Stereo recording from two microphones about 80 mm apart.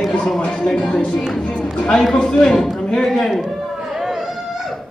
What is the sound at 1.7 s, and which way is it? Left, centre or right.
Speech, centre.